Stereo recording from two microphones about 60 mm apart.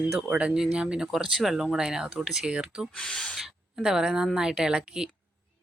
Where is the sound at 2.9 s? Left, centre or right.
Centre.